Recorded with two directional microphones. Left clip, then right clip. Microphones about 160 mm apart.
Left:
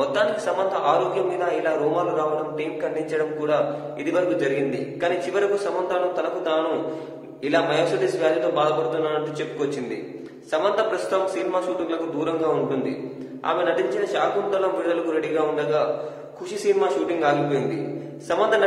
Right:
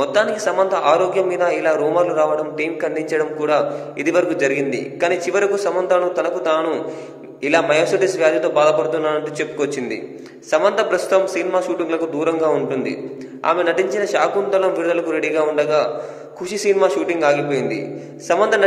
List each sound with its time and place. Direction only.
0.0 s a man's voice: 30° right (ahead or behind)
2.8 s a man's voice: 30° right (ahead or behind)
10.5 s a man's voice: 30° right (ahead or behind)